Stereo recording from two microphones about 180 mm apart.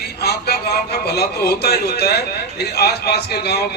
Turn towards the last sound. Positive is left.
turn(degrees=65)  # may be behind; listen again after turning